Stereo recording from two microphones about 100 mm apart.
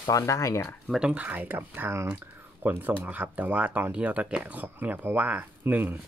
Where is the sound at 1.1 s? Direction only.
15° right (ahead or behind).